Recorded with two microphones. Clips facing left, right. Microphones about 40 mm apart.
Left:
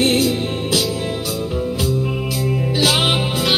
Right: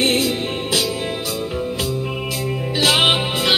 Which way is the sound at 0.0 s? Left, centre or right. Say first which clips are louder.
Left 2 dB; right.